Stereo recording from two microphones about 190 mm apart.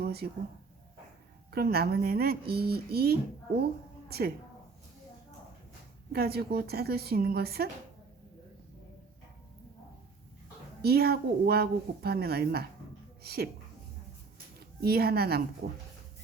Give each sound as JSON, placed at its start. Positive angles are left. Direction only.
{"t": 0.0, "sound": "a sound", "side_deg": -55}
{"t": 1.5, "sound": "speech", "side_deg": -55}
{"t": 6.1, "sound": "speech", "side_deg": -55}
{"t": 10.8, "sound": "speech", "side_deg": -55}
{"t": 14.6, "sound": "speech", "side_deg": -55}